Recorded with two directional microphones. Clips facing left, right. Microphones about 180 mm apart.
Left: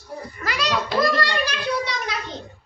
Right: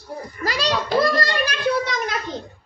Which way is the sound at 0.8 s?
45° right (ahead or behind).